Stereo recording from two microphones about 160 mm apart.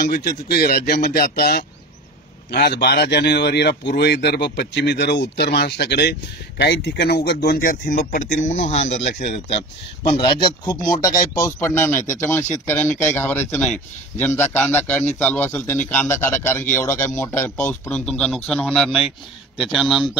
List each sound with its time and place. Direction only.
0.0 s a man's voice: 75° left (ahead or behind); by 8.8 s 50° left (ahead or behind)
10.1 s speech: 30° left (ahead or behind)
11.3 s a man's voice: 15° left (ahead or behind); by 20.1 s centre (ahead or behind)